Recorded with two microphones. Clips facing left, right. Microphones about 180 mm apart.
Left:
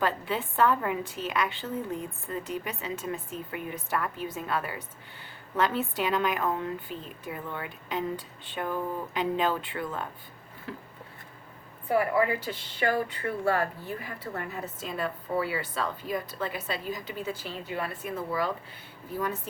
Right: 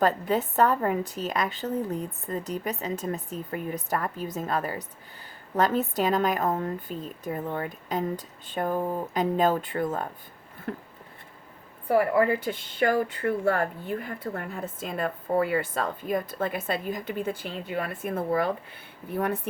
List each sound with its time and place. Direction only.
0.0 s a woman's voice: 40° right (ahead or behind)
11.9 s speech: 45° right (ahead or behind); by 19.4 s 60° right (ahead or behind)